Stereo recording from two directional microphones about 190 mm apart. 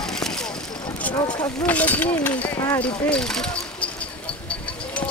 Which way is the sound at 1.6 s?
10° left (ahead or behind).